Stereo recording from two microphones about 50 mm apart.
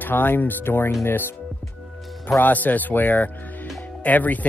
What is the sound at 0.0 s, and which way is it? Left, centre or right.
Speech, left.